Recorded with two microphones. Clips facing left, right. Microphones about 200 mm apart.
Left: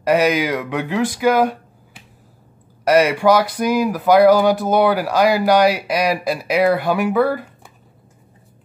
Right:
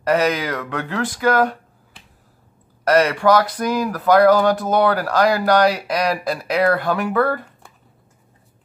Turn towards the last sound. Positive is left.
turn(degrees=5)  # may be behind; listen again after turning